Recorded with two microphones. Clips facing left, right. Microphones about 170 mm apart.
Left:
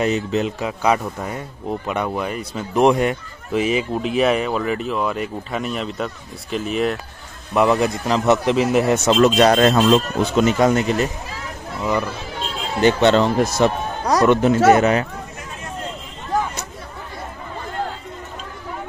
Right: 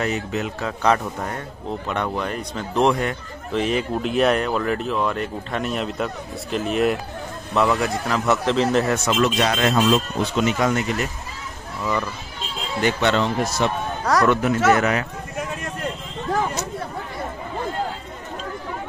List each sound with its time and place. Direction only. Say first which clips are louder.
0.0 s speech: left 5 dB; 25° left (ahead or behind)
0.7 s speech: left 1 dB; 10° left (ahead or behind)
3.5 s speech: left 2 dB; 5° left (ahead or behind)
7.5 s speech: left 3 dB; 20° left (ahead or behind)
8.9 s speech: left 5 dB; 25° left (ahead or behind)
9.2 s speech: left 8 dB; 45° left (ahead or behind)
12.8 s speech: left 6 dB; 35° left (ahead or behind)
14.0 s speech: left 4 dB; 20° left (ahead or behind)